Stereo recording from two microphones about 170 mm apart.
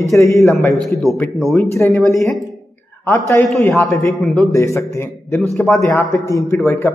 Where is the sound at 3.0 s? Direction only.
15° left (ahead or behind).